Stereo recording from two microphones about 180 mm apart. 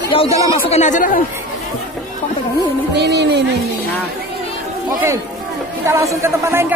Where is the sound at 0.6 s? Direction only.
40° left (ahead or behind).